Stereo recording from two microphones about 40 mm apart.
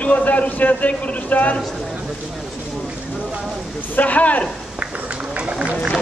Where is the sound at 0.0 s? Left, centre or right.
Left.